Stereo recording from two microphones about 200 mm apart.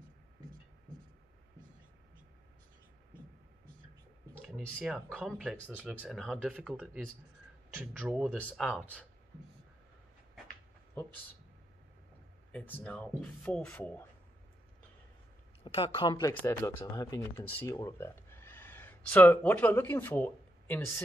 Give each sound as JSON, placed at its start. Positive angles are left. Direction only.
{"t": 4.6, "sound": "speech", "side_deg": 0}
{"t": 8.4, "sound": "speech", "side_deg": 5}
{"t": 12.5, "sound": "speech", "side_deg": 5}
{"t": 15.6, "sound": "speech", "side_deg": 25}